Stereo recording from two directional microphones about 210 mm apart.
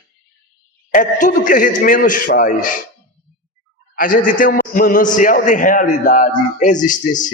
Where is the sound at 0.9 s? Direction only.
40° left (ahead or behind).